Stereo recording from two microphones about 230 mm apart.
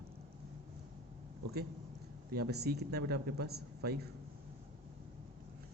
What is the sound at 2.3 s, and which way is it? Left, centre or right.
Speech, right.